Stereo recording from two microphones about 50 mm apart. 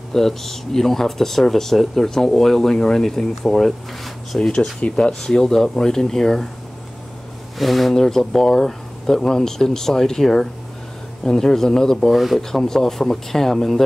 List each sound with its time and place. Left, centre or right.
0.1 s speech: centre
4.4 s speech: centre
7.5 s speech: centre
12.1 s speech: centre
12.4 s speech: centre